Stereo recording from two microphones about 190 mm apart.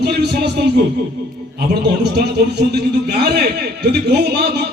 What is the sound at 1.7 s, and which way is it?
A man's voice, 60° right (ahead or behind).